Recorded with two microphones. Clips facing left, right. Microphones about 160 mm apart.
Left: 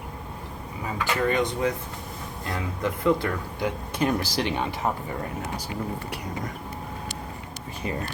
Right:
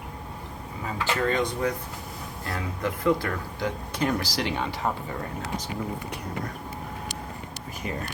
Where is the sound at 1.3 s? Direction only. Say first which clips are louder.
Left 2 dB; 20° left (ahead or behind).